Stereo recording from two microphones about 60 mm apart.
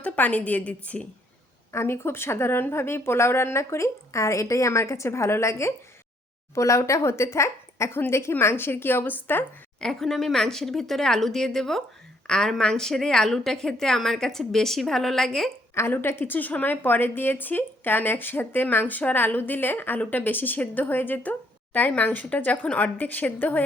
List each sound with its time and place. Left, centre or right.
0.0 s a woman's voice: left
1.7 s speech: left
9.8 s a woman's voice: centre
15.9 s a woman's voice: left